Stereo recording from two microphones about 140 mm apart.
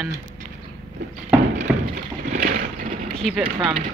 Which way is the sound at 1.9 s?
55° right (ahead or behind).